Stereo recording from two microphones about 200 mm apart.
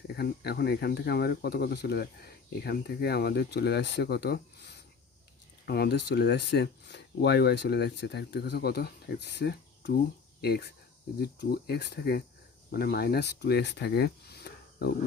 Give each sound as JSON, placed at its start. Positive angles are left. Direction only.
{"t": 0.2, "sound": "speech", "side_deg": 55}